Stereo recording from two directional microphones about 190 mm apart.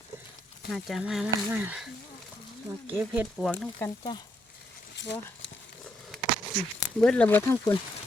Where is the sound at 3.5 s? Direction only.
10° left (ahead or behind).